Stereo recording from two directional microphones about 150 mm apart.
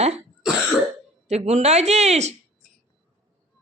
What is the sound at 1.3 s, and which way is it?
Speech, 45° right (ahead or behind).